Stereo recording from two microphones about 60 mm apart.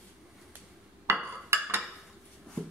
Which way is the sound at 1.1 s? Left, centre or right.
Right.